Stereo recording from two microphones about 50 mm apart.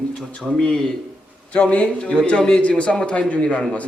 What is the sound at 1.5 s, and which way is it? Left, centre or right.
Speech, left.